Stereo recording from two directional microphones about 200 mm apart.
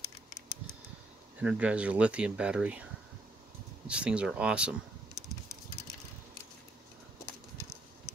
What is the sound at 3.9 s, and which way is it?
Speech, 5° right (ahead or behind).